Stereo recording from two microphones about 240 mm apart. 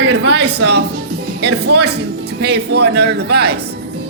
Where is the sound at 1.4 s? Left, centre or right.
Right.